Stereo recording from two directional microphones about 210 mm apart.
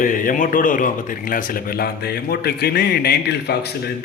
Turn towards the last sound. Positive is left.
turn(degrees=50)  # may be behind; listen again after turning